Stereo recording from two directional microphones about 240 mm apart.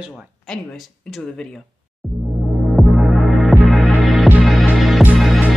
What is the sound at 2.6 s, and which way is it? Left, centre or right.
Music, centre.